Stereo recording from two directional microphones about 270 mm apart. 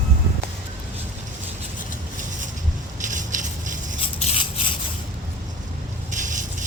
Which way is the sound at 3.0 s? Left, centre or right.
Right.